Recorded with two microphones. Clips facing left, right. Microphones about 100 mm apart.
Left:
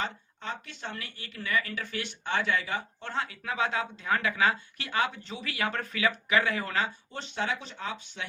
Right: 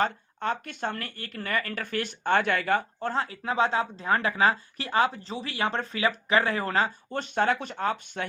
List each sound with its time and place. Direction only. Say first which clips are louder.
0.0 s speech: right 8 dB; 55° right (ahead or behind)
3.1 s speech: right 4 dB; 35° right (ahead or behind); by 8.3 s 50° right (ahead or behind)